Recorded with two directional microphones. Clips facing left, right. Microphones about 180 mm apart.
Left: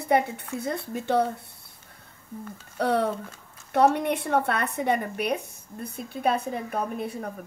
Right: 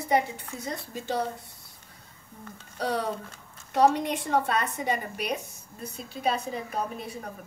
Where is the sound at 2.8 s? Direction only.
60° left (ahead or behind).